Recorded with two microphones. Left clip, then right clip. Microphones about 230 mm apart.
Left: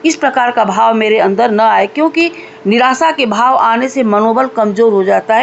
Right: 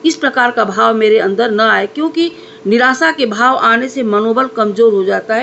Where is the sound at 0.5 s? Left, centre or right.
Left.